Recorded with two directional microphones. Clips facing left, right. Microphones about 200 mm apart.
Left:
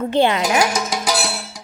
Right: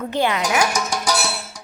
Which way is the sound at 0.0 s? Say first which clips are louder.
Left 4 dB; 30° left (ahead or behind).